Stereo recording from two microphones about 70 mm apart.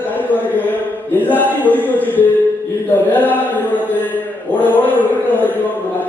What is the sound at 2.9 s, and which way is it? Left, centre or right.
Chant, left.